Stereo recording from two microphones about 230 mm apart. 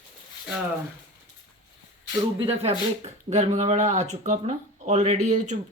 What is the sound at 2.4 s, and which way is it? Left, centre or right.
Speech, right.